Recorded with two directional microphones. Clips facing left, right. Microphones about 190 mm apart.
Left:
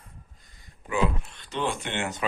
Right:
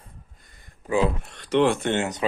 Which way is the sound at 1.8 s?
45° right (ahead or behind).